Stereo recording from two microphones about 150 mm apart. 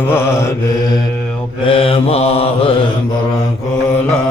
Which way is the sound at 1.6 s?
35° left (ahead or behind).